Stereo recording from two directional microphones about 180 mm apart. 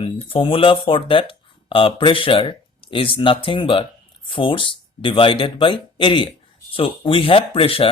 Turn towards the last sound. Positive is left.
turn(degrees=30)  # may be behind; listen again after turning